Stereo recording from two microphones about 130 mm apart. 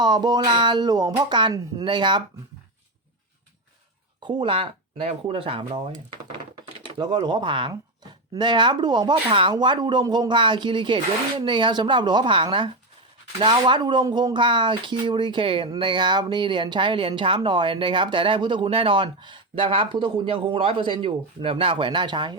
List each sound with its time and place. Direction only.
0.0 s speech: 35° right (ahead or behind)
4.2 s speech: 40° right (ahead or behind)
7.0 s speech: 40° right (ahead or behind)